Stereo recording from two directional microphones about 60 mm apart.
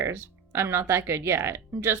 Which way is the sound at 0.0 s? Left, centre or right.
Right.